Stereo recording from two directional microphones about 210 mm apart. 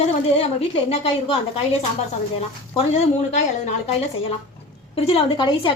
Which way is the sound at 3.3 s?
35° left (ahead or behind).